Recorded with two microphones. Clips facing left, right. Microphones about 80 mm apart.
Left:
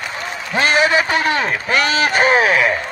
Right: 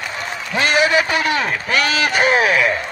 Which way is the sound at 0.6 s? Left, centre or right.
Left.